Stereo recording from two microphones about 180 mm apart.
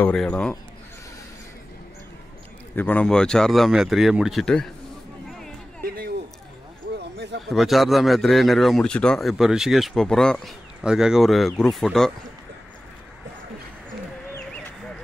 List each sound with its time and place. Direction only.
0.0 s a man's voice: 5° left (ahead or behind)
2.7 s a man's voice: 10° left (ahead or behind)
7.0 s a sound: 75° right (ahead or behind)
7.4 s a man's voice: centre (ahead or behind)